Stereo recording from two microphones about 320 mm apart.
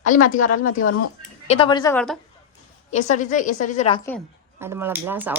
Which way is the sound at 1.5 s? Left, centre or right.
Centre.